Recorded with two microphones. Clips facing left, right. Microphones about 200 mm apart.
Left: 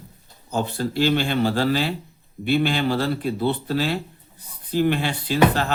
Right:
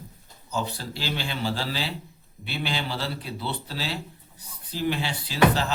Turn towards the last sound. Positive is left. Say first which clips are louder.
# left 3 dB
turn(degrees=55)  # may be behind; listen again after turning